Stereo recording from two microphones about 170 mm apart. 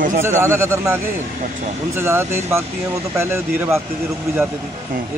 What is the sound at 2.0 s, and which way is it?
Speech, 15° right (ahead or behind).